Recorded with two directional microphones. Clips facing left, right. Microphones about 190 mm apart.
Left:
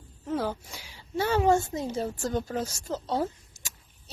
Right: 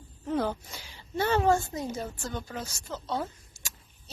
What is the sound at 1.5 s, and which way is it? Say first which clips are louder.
Speech: left 2 dB; 20° left (ahead or behind).